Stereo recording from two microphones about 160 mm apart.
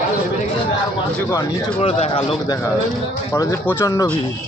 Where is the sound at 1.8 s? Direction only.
35° left (ahead or behind).